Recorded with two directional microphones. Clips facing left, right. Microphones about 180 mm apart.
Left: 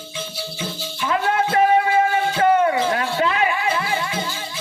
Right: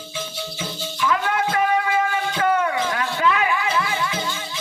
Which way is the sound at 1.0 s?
30° left (ahead or behind).